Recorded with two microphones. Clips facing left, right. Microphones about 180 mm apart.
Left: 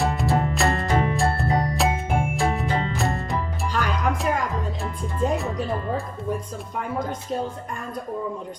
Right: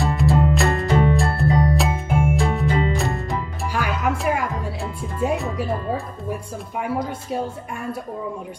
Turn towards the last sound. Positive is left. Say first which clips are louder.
# right 3 dB
turn(degrees=-10)  # may be behind; listen again after turning